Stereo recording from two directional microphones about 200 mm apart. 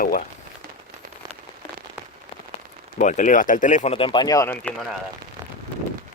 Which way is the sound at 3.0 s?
40° left (ahead or behind).